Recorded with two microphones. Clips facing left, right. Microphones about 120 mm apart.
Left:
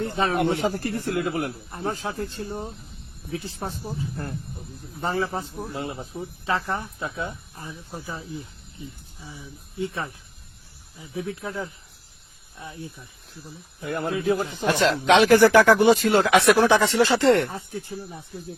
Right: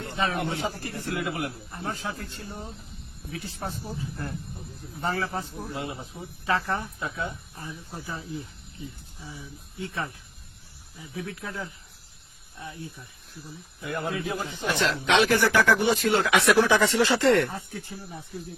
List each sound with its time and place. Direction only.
0.0 s speech: 35° left (ahead or behind)
0.3 s a man's voice: 55° left (ahead or behind); by 5.6 s 20° left (ahead or behind)
5.7 s a man's voice: 40° left (ahead or behind)
6.4 s speech: 20° left (ahead or behind)
11.0 s speech: 25° left (ahead or behind)
13.8 s a man's voice: 45° left (ahead or behind); by 18.2 s 20° left (ahead or behind)